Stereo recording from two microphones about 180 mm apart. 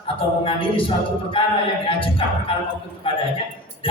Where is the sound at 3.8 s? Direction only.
30° left (ahead or behind).